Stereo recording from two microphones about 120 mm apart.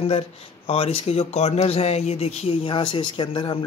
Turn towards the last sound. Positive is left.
turn(degrees=45)  # may be behind; listen again after turning